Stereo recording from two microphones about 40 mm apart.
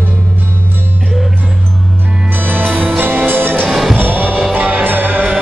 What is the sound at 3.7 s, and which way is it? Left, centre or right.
Music, centre.